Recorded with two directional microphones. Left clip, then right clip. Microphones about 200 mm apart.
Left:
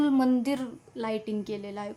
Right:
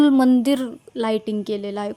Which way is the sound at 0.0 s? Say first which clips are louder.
Right 9 dB; 30° right (ahead or behind).